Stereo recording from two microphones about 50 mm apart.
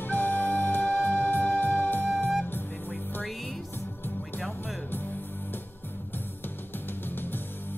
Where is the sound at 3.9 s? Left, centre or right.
Left.